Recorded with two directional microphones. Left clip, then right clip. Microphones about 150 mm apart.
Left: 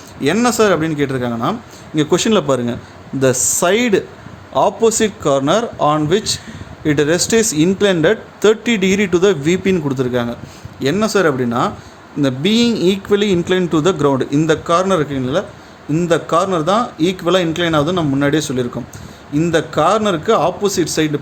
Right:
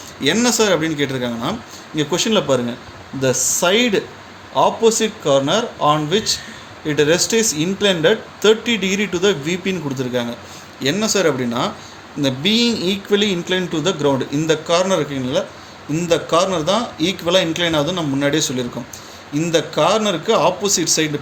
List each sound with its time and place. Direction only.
0.2 s speech: 60° left (ahead or behind)
2.0 s speech: 80° left
4.5 s speech: 90° left; by 11.7 s 50° left (ahead or behind)
12.2 s speech: 65° left (ahead or behind)